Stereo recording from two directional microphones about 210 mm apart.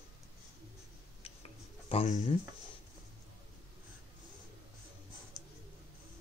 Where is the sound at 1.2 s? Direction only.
25° left (ahead or behind).